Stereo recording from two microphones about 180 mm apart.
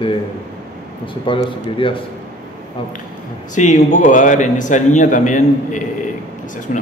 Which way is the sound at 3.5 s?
40° left (ahead or behind).